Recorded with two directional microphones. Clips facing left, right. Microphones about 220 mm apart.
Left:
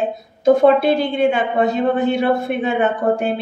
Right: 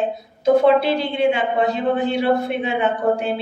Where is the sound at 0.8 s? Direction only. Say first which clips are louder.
Left 3 dB; 45° left (ahead or behind).